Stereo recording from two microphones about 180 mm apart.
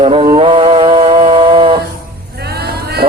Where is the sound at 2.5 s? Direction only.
60° right (ahead or behind).